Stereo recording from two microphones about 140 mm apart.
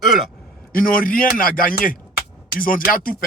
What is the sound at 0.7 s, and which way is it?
A man's voice, 90° left.